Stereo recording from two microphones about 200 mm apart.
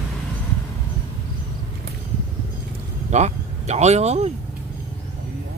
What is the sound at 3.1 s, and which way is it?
Speech, 35° right (ahead or behind).